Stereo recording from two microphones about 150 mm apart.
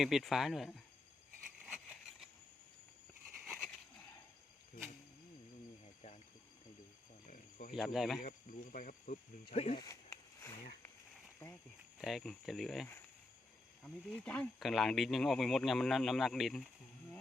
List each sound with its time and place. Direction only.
0.0 s speech: centre (ahead or behind)
1.6 s a sound: 5° right (ahead or behind)
3.4 s a sound: centre (ahead or behind)
5.8 s a sound: 45° left (ahead or behind)
7.3 s cricket: 60° left (ahead or behind)
7.7 s speech: centre (ahead or behind)
8.2 s speech: 60° left (ahead or behind)
9.5 s speech: 45° left (ahead or behind)
9.7 s speech: 20° left (ahead or behind)
11.9 s speech: centre (ahead or behind)